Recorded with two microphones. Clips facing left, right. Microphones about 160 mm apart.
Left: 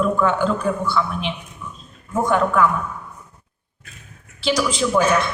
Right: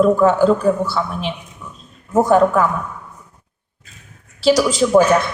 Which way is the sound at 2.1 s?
40° right (ahead or behind).